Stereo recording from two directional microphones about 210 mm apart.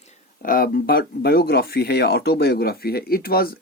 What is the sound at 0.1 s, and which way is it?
Speech, 40° left (ahead or behind).